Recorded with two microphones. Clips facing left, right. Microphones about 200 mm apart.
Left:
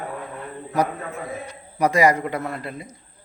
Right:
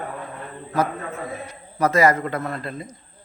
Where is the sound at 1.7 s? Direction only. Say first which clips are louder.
Even; 15° left (ahead or behind).